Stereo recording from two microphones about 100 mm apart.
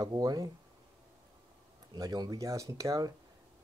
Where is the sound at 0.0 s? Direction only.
40° right (ahead or behind).